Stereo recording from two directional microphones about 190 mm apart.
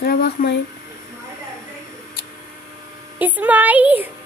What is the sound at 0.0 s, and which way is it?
Speech, 55° left (ahead or behind).